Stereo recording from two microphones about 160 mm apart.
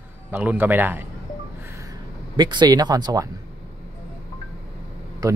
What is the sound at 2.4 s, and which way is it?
Speech, 25° right (ahead or behind).